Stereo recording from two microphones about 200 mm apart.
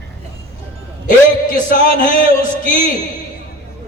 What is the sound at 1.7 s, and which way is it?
A man's voice, 45° left (ahead or behind).